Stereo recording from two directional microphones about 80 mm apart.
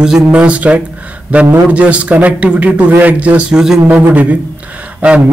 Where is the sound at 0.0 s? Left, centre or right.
Centre.